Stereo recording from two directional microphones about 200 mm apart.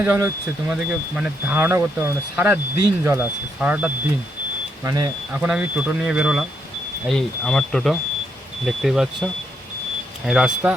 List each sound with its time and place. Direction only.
0.0 s speech: 10° right (ahead or behind)
4.8 s speech: 20° right (ahead or behind)
5.3 s speech: 5° right (ahead or behind)